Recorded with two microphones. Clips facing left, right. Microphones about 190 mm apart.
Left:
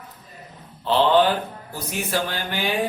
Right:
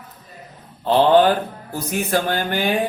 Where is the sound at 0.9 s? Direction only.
50° right (ahead or behind).